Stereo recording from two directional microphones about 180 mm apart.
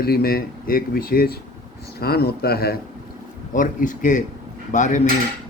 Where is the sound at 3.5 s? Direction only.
50° left (ahead or behind).